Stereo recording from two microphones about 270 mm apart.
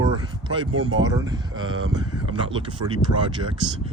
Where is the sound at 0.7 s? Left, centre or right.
Right.